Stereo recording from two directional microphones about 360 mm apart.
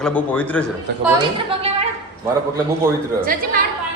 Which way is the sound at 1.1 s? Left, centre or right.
Centre.